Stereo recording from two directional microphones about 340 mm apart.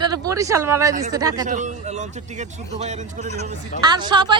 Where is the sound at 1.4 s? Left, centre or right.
Right.